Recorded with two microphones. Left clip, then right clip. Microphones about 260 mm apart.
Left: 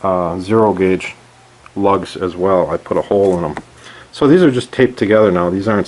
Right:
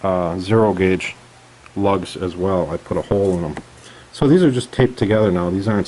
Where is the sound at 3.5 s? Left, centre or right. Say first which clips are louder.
Left 5 dB; centre.